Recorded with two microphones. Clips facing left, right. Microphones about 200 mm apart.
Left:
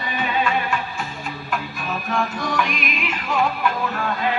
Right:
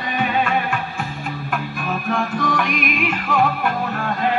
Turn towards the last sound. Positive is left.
turn(degrees=-50)  # may be behind; listen again after turning